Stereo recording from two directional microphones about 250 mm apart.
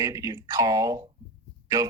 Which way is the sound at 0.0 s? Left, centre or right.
Centre.